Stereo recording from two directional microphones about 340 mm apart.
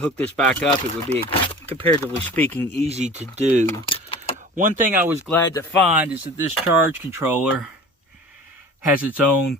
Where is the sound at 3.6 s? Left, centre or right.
Centre.